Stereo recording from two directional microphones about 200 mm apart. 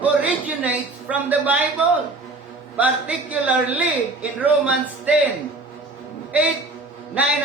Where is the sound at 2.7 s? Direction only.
5° right (ahead or behind).